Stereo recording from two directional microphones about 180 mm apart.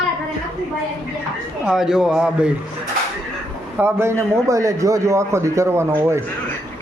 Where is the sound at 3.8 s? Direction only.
15° right (ahead or behind).